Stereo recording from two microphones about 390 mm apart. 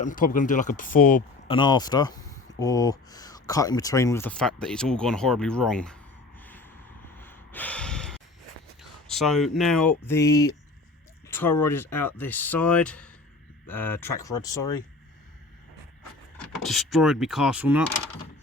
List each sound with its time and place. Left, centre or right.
0.0 s speech: left; by 6.0 s centre
6.4 s snort: centre
7.2 s gasp: centre
8.8 s speech: centre
16.4 s speech: centre